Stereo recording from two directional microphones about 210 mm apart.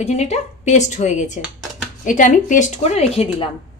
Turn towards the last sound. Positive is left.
turn(degrees=30)  # may be behind; listen again after turning